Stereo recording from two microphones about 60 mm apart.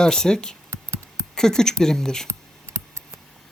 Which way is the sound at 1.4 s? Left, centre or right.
Centre.